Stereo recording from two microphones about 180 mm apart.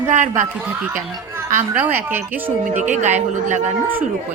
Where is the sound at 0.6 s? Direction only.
10° right (ahead or behind).